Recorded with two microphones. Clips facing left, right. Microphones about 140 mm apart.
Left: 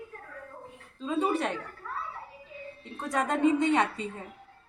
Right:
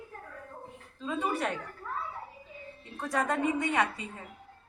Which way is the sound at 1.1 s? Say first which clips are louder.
Left 3 dB; 20° left (ahead or behind).